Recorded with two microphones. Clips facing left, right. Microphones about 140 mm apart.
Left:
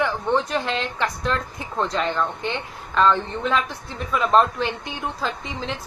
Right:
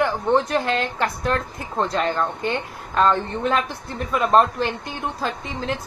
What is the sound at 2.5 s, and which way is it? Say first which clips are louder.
A woman's voice: right 1 dB; 45° right (ahead or behind).